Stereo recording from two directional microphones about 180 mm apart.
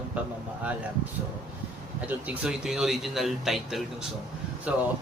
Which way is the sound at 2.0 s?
10° right (ahead or behind).